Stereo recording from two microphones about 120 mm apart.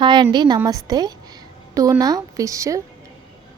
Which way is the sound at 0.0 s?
40° right (ahead or behind).